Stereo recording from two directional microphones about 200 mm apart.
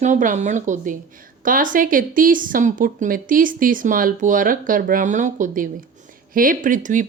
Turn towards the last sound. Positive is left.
turn(degrees=-40)  # may be behind; listen again after turning